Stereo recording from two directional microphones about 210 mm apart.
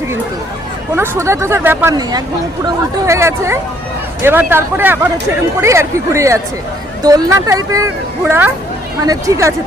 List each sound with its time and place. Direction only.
0.9 s speech: 10° right (ahead or behind)